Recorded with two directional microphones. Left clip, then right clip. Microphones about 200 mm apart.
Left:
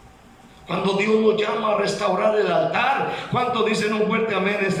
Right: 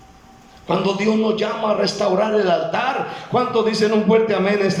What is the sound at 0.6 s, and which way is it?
A man's voice, 30° right (ahead or behind).